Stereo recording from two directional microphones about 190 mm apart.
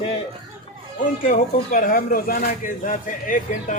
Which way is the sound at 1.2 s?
45° left (ahead or behind).